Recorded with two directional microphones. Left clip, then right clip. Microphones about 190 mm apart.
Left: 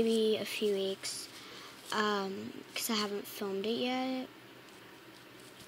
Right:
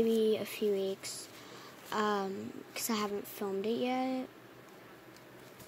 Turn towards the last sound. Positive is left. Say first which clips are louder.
# right 1 dB
turn(degrees=-15)  # may be behind; listen again after turning